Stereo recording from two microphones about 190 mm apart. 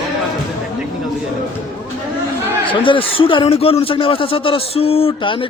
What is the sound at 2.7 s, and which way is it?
A man's voice, 25° left (ahead or behind).